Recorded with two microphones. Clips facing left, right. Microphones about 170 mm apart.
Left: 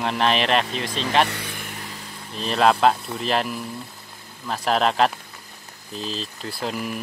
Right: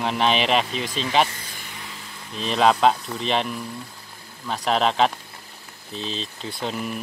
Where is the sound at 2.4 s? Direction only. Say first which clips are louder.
Even; centre (ahead or behind).